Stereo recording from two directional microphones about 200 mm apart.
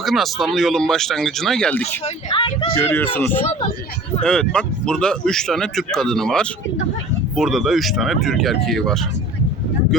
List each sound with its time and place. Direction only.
0.0 s speech: centre (ahead or behind)
2.0 s speech: 25° left (ahead or behind)
2.7 s speech: 10° left (ahead or behind)